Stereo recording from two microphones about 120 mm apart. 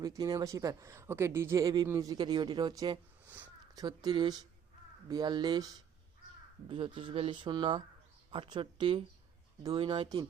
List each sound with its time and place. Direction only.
0.0 s speech: 30° right (ahead or behind)
3.2 s a sound: 15° right (ahead or behind)
3.8 s speech: 35° right (ahead or behind)
6.7 s speech: 45° right (ahead or behind)